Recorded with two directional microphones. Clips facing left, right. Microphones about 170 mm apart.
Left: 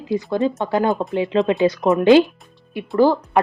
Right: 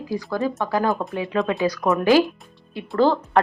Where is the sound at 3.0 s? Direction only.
10° left (ahead or behind).